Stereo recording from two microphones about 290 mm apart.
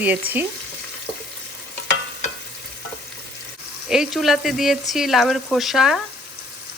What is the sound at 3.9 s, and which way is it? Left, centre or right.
Frying, centre.